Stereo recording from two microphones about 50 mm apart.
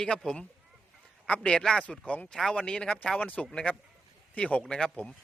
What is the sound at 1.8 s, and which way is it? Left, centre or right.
A man's voice, left.